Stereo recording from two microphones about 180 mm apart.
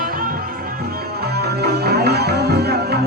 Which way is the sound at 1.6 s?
60° right (ahead or behind).